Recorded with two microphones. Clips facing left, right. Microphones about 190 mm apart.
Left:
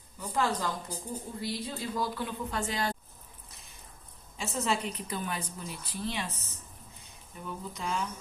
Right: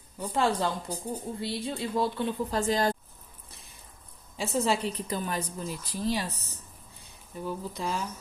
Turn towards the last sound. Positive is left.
turn(degrees=-35)  # may be behind; listen again after turning